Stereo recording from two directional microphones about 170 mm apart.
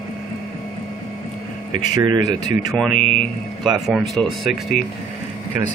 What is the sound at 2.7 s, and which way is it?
Speech, 5° left (ahead or behind).